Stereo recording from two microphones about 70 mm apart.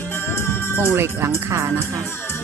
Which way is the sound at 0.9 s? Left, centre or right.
Right.